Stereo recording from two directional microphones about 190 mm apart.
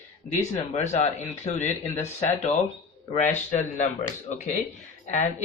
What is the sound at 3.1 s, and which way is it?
Speech, 40° left (ahead or behind).